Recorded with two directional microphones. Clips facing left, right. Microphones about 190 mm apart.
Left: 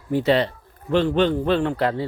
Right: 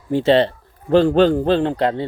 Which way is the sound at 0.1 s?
25° right (ahead or behind).